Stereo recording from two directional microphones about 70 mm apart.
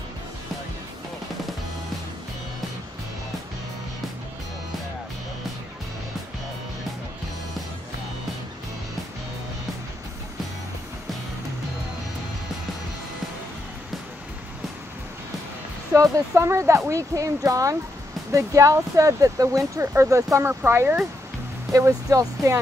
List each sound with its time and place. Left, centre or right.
16.0 s speech: right
19.8 s speech: right
20.4 s speech: right
21.7 s speech: right